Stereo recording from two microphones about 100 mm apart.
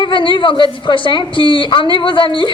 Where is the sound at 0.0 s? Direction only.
55° left (ahead or behind).